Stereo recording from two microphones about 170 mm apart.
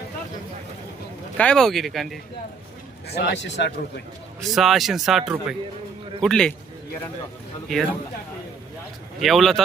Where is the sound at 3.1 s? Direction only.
65° left (ahead or behind); by 3.7 s 90° left.